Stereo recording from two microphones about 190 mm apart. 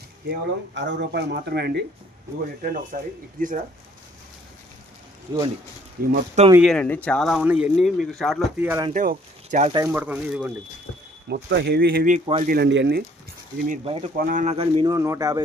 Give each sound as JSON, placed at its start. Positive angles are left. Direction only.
{"t": 0.3, "sound": "speech", "side_deg": -70}
{"t": 2.9, "sound": "speech", "side_deg": -50}
{"t": 6.0, "sound": "speech", "side_deg": -50}
{"t": 6.6, "sound": "speech", "side_deg": 5}
{"t": 8.5, "sound": "speech", "side_deg": -10}
{"t": 8.9, "sound": "speech", "side_deg": -45}
{"t": 9.7, "sound": "speech", "side_deg": -10}
{"t": 11.3, "sound": "speech", "side_deg": -65}
{"t": 12.2, "sound": "a man's voice", "side_deg": -30}
{"t": 12.5, "sound": "speech", "side_deg": -60}
{"t": 13.8, "sound": "speech", "side_deg": -30}
{"t": 14.2, "sound": "speech", "side_deg": -45}
{"t": 14.5, "sound": "speech", "side_deg": -30}
{"t": 14.8, "sound": "speech", "side_deg": -15}